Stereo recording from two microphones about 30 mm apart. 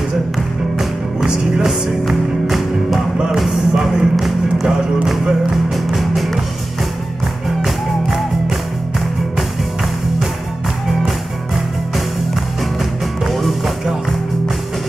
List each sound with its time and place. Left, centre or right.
1.6 s music: centre
5.9 s music: centre
8.1 s music: centre
13.3 s music: centre